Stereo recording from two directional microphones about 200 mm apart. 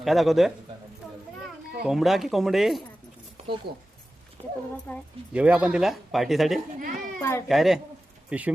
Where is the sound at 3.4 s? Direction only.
30° right (ahead or behind).